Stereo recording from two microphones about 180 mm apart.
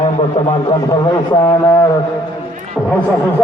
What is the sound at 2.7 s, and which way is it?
Speech, 5° left (ahead or behind).